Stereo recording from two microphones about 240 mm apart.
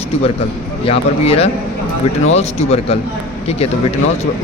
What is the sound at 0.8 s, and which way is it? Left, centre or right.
Speech, left.